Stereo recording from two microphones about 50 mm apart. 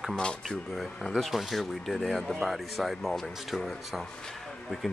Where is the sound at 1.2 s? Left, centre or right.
Centre.